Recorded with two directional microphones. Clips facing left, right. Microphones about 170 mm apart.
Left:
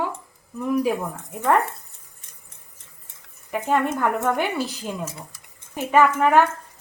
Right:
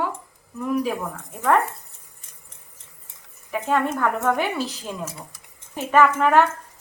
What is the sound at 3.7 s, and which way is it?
A woman's voice, 15° left (ahead or behind).